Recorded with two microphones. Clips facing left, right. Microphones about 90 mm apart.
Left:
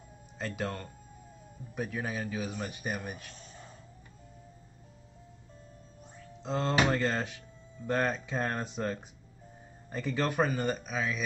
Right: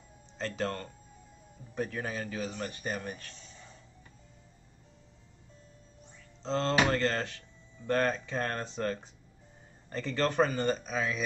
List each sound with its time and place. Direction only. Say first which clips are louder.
0.4 s speech: right 2 dB; 10° left (ahead or behind)
3.3 s a sound: left 3 dB; 45° left (ahead or behind)
6.4 s speech: right 1 dB; 10° left (ahead or behind)